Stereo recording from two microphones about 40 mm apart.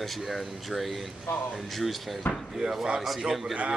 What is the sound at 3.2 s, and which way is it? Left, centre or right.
Speech, centre.